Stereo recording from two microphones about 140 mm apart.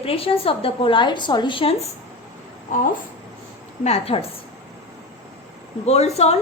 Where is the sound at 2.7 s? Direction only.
65° left (ahead or behind).